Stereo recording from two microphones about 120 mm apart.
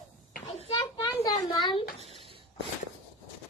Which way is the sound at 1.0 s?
30° left (ahead or behind).